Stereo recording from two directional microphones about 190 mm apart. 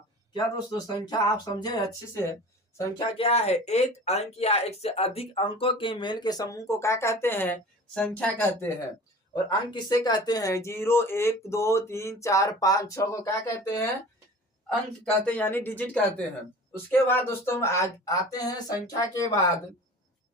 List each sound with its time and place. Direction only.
0.3 s speech: 20° left (ahead or behind)
3.1 s speech: 30° left (ahead or behind); by 8.7 s 10° left (ahead or behind)
9.3 s speech: 20° left (ahead or behind)
15.0 s speech: 10° left (ahead or behind)